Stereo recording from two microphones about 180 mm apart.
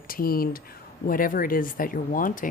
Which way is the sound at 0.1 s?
55° left (ahead or behind).